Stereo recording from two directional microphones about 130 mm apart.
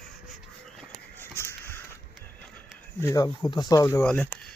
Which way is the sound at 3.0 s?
25° left (ahead or behind).